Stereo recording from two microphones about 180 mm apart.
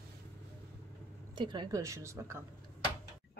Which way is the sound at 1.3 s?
25° right (ahead or behind).